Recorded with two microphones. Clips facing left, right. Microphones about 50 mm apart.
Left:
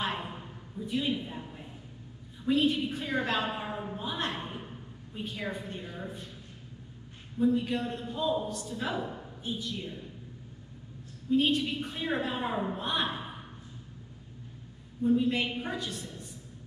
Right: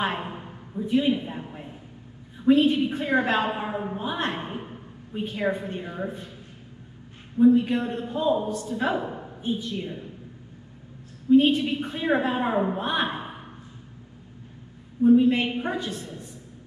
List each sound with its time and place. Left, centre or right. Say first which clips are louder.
0.0 s a sound: right 6 dB; right
2.4 s a woman's voice: right 8 dB; right
7.3 s a woman's voice: right 9 dB; right
11.2 s a woman's voice: right 8 dB; centre
15.0 s a woman's voice: right 8 dB; right